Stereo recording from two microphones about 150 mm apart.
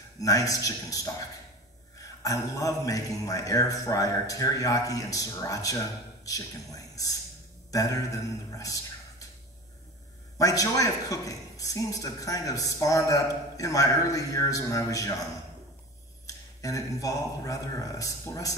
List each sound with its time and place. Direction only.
0.2 s a man's voice: 25° left (ahead or behind)
10.3 s a man's voice: 20° left (ahead or behind)
16.3 s a man's voice: 20° left (ahead or behind)